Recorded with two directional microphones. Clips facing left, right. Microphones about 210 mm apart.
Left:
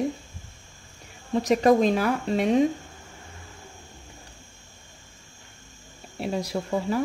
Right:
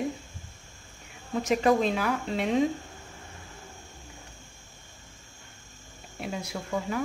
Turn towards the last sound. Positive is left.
turn(degrees=35)  # may be behind; listen again after turning